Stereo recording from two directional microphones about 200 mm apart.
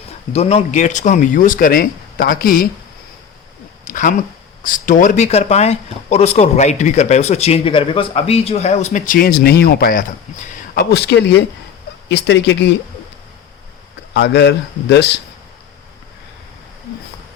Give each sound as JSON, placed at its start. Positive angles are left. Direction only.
{"t": 0.3, "sound": "speech", "side_deg": 30}
{"t": 3.8, "sound": "a sound", "side_deg": 40}
{"t": 4.6, "sound": "a man's voice", "side_deg": 40}
{"t": 14.1, "sound": "a man's voice", "side_deg": 60}